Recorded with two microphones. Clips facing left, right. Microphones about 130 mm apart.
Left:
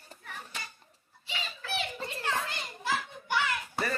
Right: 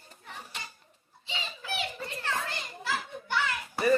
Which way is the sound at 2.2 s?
15° left (ahead or behind).